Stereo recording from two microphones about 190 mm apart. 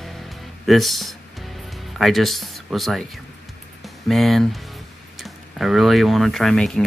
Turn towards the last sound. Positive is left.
turn(degrees=0)  # may be behind; listen again after turning